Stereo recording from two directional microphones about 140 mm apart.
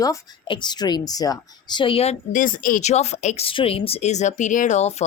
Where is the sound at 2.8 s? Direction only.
50° left (ahead or behind).